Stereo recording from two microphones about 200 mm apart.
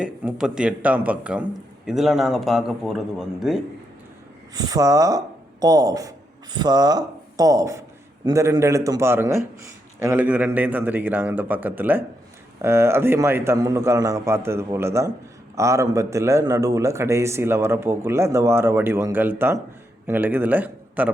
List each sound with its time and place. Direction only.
0.0 s speech: 5° right (ahead or behind)
4.5 s a man's voice: 20° right (ahead or behind)